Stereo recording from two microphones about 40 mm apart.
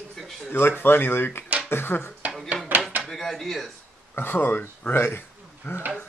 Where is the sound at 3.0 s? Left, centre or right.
Centre.